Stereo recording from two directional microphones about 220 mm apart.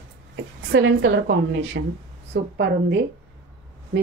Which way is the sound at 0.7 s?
60° right (ahead or behind).